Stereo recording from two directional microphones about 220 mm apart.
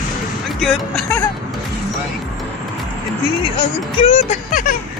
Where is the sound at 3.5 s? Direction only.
25° left (ahead or behind).